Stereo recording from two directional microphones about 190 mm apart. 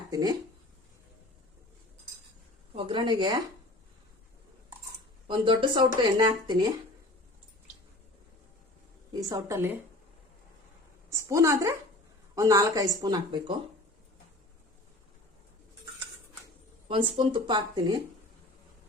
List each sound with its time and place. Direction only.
0.1 s speech: 20° right (ahead or behind)
2.7 s speech: 25° right (ahead or behind)
5.3 s speech: 25° right (ahead or behind)
9.3 s a woman's voice: 15° right (ahead or behind)
11.1 s a woman's voice: 15° right (ahead or behind)
16.9 s speech: 25° right (ahead or behind)